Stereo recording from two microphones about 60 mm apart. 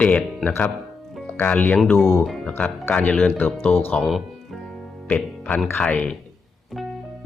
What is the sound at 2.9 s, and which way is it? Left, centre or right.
Speech, left.